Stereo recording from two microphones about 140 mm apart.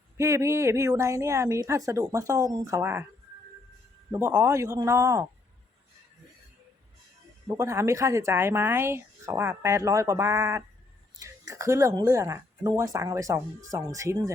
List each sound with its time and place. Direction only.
0.2 s speech: 20° right (ahead or behind)
4.1 s speech: 15° right (ahead or behind)
7.4 s speech: 20° right (ahead or behind)